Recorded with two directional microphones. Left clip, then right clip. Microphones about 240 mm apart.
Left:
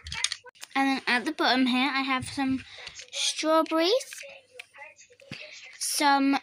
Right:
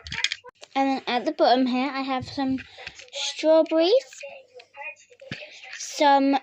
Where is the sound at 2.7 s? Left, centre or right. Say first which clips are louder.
Right 1 dB; left.